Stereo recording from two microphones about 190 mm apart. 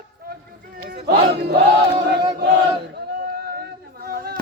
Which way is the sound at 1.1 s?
55° right (ahead or behind).